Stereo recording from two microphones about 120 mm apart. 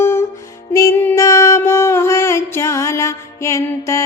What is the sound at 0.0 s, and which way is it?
Music, 20° left (ahead or behind).